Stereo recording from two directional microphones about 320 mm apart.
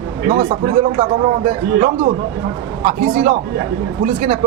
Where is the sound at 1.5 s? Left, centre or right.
Centre.